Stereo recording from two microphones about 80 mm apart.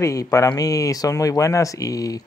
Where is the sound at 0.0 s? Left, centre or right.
Left.